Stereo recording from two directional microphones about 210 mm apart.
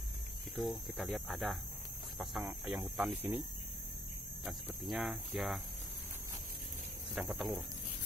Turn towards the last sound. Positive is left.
turn(degrees=-5)  # may be behind; listen again after turning